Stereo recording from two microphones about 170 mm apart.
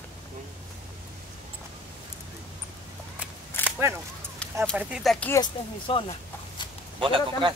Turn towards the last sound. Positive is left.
turn(degrees=-30)  # may be behind; listen again after turning